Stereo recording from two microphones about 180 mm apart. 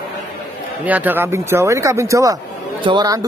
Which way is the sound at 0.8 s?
10° right (ahead or behind).